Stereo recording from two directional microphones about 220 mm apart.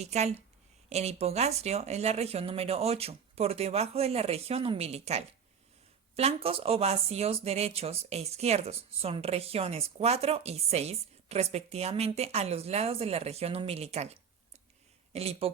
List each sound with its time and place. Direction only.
0.0 s speech: 30° right (ahead or behind)